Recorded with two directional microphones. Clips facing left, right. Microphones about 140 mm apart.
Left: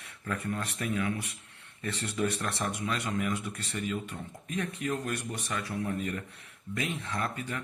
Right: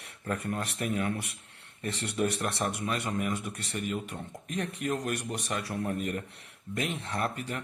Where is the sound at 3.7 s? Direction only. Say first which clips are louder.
Even; 70° right (ahead or behind).